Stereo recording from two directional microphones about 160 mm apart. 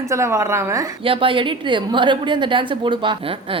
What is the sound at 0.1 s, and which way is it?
Speech, 20° right (ahead or behind).